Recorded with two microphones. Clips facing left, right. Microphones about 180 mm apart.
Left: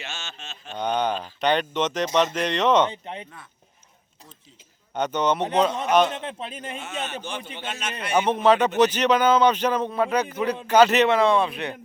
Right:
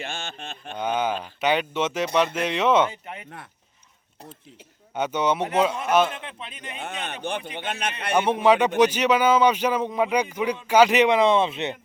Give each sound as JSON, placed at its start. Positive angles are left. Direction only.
{"t": 0.0, "sound": "a sound", "side_deg": -55}
{"t": 0.8, "sound": "speech", "side_deg": -5}
{"t": 2.9, "sound": "speech", "side_deg": 30}
{"t": 4.9, "sound": "speech", "side_deg": -10}
{"t": 6.1, "sound": "speech", "side_deg": 35}
{"t": 6.8, "sound": "a man's voice", "side_deg": -60}
{"t": 8.1, "sound": "speech", "side_deg": -10}